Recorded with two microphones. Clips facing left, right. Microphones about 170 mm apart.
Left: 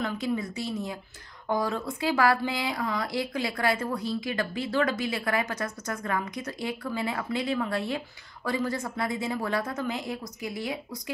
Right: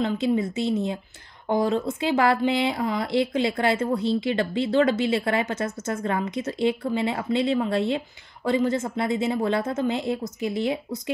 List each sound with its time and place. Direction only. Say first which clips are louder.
0.0 s speech: right 6 dB; 25° right (ahead or behind)